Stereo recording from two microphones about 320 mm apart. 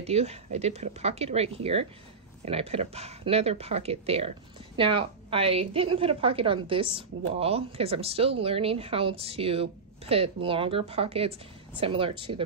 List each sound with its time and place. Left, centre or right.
0.0 s a woman's voice: centre